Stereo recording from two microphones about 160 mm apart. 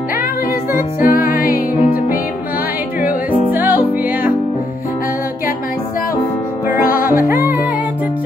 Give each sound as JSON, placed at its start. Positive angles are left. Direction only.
{"t": 1.0, "sound": "music", "side_deg": 60}
{"t": 3.0, "sound": "music", "side_deg": -10}
{"t": 6.8, "sound": "music", "side_deg": 60}